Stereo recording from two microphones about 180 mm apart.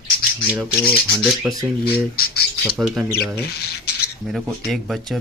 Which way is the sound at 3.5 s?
60° left (ahead or behind).